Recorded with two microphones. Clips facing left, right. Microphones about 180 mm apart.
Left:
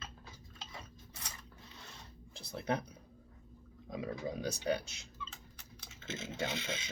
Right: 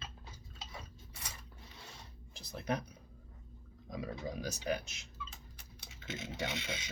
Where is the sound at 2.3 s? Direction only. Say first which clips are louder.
Left 1 dB; 30° left (ahead or behind).